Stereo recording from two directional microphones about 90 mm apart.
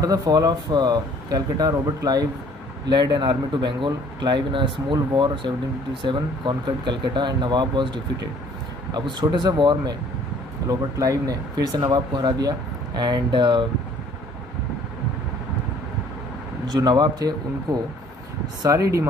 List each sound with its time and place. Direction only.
0.0 s speech: 40° right (ahead or behind)
2.9 s speech: 55° right (ahead or behind)
10.7 s speech: 40° right (ahead or behind); by 13.7 s 60° right (ahead or behind)
16.8 s speech: 50° right (ahead or behind)